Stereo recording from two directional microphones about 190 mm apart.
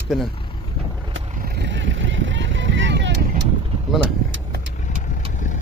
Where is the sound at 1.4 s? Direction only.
65° right (ahead or behind).